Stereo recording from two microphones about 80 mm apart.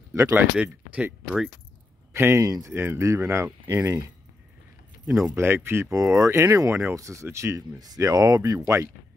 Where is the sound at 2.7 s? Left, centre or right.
Right.